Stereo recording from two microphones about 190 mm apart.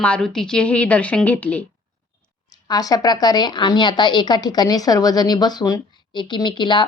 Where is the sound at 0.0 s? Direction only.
5° left (ahead or behind).